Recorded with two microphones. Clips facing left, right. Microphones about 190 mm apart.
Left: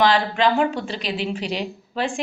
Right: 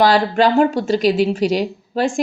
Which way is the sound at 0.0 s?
40° right (ahead or behind).